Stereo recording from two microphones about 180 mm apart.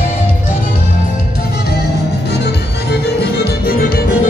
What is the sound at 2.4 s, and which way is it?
Music, 65° left (ahead or behind).